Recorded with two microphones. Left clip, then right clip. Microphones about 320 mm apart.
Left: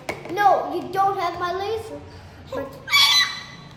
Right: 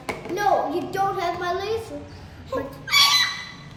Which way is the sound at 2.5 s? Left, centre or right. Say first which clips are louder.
Left 1 dB; centre.